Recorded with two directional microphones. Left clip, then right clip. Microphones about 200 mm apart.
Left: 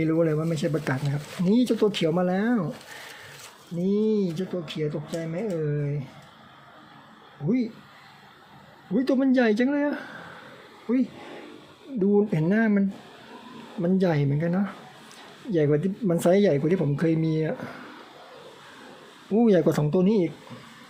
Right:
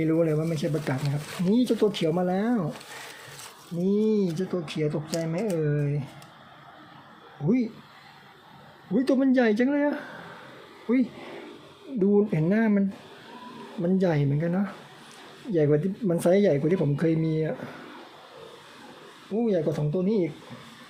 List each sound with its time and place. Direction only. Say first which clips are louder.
0.0 s speech: left 1 dB; 10° left (ahead or behind)
3.8 s speech: even; 5° left (ahead or behind)
7.4 s speech: right 1 dB; centre (ahead or behind)
9.0 s speech: even; 5° left (ahead or behind)
12.1 s speech: left 1 dB; 5° left (ahead or behind)
13.8 s speech: left 1 dB; 10° left (ahead or behind)
19.3 s speech: left 5 dB; 30° left (ahead or behind)